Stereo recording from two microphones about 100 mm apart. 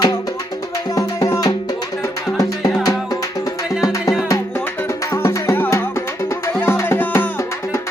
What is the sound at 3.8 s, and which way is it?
Music, 35° left (ahead or behind).